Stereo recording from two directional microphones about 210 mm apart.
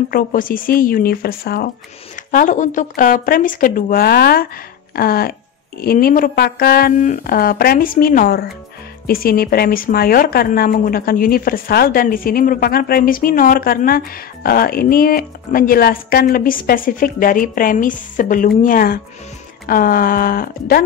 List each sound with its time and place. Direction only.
0.1 s a woman's voice: 40° left (ahead or behind)